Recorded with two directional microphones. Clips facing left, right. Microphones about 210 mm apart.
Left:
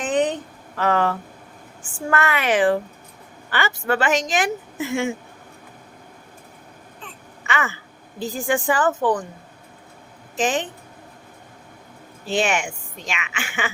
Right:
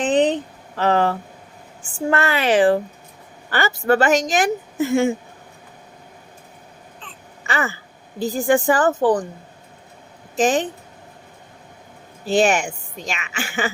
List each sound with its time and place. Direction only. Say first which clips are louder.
0.0 s a sound: right 4 dB; 30° right (ahead or behind)
0.8 s a woman's voice: right 2 dB; 30° right (ahead or behind)
7.4 s a sound: right 2 dB; 35° right (ahead or behind)
8.2 s a woman's voice: right 5 dB; 40° right (ahead or behind)
10.3 s a woman's voice: right 4 dB; 40° right (ahead or behind)
12.3 s a woman's voice: right 5 dB; 40° right (ahead or behind)